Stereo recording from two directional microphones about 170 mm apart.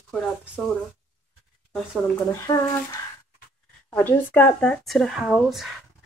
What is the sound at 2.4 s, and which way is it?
Speech, 20° left (ahead or behind).